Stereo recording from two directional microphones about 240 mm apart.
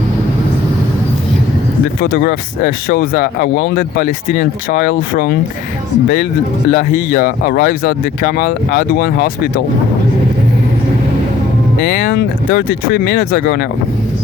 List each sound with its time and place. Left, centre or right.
2.0 s speech: left
6.7 s speech: left
11.9 s speech: left